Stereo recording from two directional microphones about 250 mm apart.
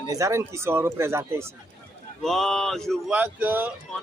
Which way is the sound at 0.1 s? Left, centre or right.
Centre.